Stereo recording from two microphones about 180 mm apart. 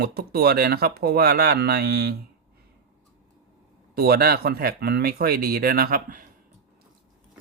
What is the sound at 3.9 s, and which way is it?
Speech, 60° right (ahead or behind).